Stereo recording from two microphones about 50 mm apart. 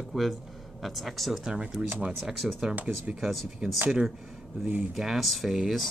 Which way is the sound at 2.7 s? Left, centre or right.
Right.